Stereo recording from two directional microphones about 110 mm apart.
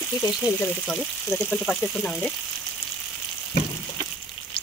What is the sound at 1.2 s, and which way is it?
Speech, 5° left (ahead or behind).